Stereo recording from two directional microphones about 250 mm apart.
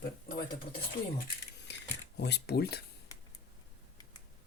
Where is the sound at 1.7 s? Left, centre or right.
Left.